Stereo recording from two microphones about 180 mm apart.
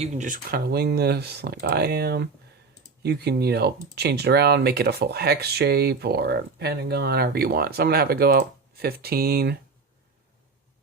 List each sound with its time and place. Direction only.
0.0 s speech: 40° right (ahead or behind); by 9.6 s 60° right (ahead or behind)